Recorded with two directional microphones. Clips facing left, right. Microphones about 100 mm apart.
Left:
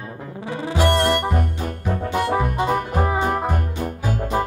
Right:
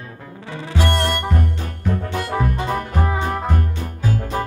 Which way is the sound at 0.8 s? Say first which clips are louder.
Left 4 dB; 15° left (ahead or behind).